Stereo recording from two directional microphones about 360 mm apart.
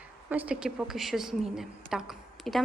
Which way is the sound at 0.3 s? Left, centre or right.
Centre.